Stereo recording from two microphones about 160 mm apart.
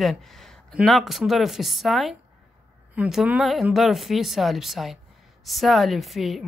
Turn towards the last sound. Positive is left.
turn(degrees=0)  # may be behind; listen again after turning